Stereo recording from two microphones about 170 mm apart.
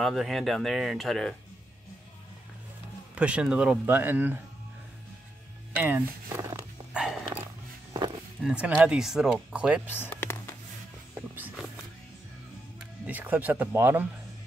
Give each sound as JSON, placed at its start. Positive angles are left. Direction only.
{"t": 0.0, "sound": "speech", "side_deg": 0}
{"t": 3.2, "sound": "speech", "side_deg": -5}
{"t": 5.8, "sound": "speech", "side_deg": -10}
{"t": 6.9, "sound": "dog", "side_deg": -5}
{"t": 8.5, "sound": "speech", "side_deg": -10}
{"t": 9.9, "sound": "a sound", "side_deg": 15}
{"t": 11.3, "sound": "a sound", "side_deg": -10}
{"t": 13.0, "sound": "speech", "side_deg": -10}